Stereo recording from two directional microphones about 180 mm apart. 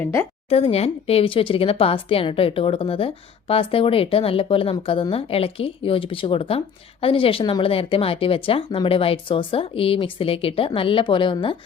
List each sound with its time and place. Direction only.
0.0 s speech: 15° left (ahead or behind)
0.5 s speech: 35° left (ahead or behind)